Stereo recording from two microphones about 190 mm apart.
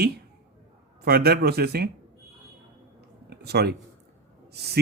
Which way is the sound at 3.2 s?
60° right (ahead or behind).